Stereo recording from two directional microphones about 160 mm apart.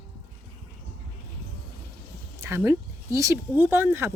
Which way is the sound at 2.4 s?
15° right (ahead or behind).